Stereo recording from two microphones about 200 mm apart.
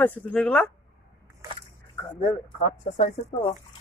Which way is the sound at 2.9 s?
35° left (ahead or behind).